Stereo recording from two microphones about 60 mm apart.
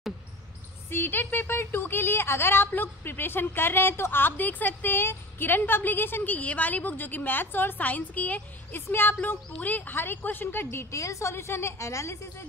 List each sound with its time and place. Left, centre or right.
0.8 s a woman's voice: left
10.9 s a woman's voice: left